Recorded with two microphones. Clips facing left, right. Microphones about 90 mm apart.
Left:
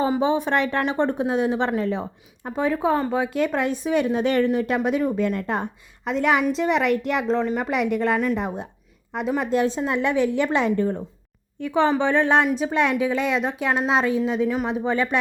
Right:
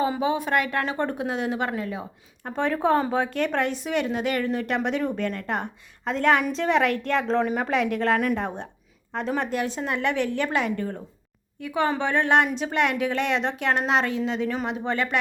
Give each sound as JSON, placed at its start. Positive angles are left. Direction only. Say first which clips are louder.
{"t": 0.0, "sound": "a woman's voice", "louder": "left 3 dB", "side_deg": 25}
{"t": 2.4, "sound": "speech", "louder": "left 2 dB", "side_deg": 10}
{"t": 3.2, "sound": "a woman's voice", "louder": "left 2 dB", "side_deg": 15}
{"t": 4.4, "sound": "a woman's voice", "louder": "left 4 dB", "side_deg": 15}
{"t": 5.3, "sound": "a woman's voice", "louder": "left 3 dB", "side_deg": 20}
{"t": 6.1, "sound": "a woman's voice", "louder": "left 1 dB", "side_deg": 10}
{"t": 9.5, "sound": "a woman's voice", "louder": "left 5 dB", "side_deg": 20}